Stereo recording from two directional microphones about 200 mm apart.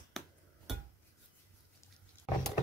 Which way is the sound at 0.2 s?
Centre (ahead or behind).